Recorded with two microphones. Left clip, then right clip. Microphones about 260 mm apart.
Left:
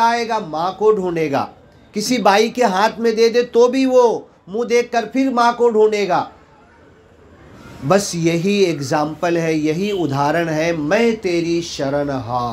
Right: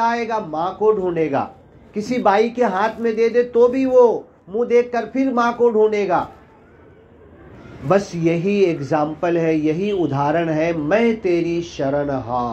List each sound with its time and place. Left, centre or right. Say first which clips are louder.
0.0 s speech: left 3 dB; left
7.9 s speech: left 1 dB; left